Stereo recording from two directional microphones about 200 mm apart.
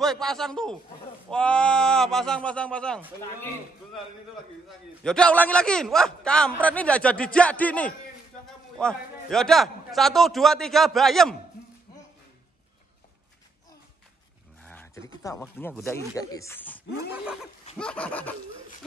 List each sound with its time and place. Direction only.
0.0 s a man's voice: centre (ahead or behind)
4.6 s a man's voice: 5° left (ahead or behind)
14.6 s a sound: 10° left (ahead or behind)
15.3 s speech: 15° left (ahead or behind)
17.1 s a man's voice: 5° right (ahead or behind)